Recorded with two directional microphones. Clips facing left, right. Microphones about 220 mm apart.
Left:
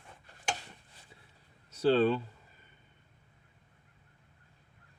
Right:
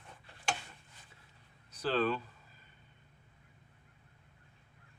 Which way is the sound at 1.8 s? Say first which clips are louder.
Left 7 dB; 30° left (ahead or behind).